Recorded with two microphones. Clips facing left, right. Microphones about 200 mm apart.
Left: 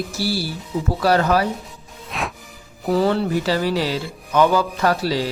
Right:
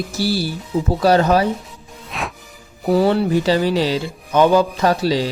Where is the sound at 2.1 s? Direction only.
Centre (ahead or behind).